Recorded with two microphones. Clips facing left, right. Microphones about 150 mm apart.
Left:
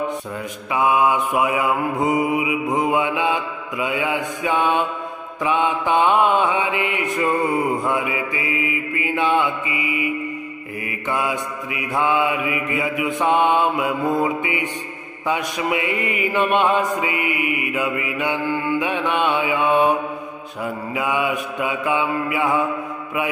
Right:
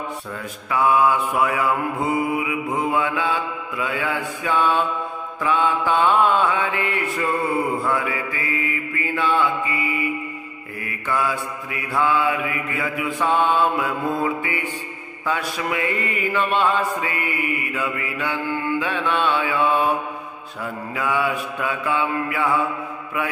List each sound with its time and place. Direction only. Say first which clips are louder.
0.7 s mantra: even; 15° left (ahead or behind)
9.7 s mantra: left 1 dB; 45° right (ahead or behind)
10.9 s mantra: even; 20° left (ahead or behind)
20.9 s mantra: even; 15° left (ahead or behind)